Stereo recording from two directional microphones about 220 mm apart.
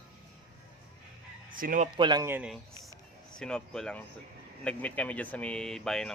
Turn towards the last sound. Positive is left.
turn(degrees=5)  # may be behind; listen again after turning